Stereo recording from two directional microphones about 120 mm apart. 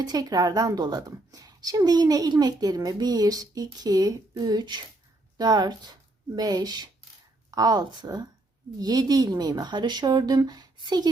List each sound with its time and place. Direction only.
0.0 s a woman's voice: 35° right (ahead or behind)